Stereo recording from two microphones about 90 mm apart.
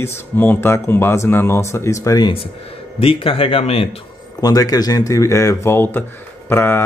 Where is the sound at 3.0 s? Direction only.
85° left.